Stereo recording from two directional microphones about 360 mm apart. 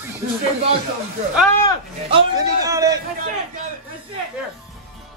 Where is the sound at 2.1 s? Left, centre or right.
Centre.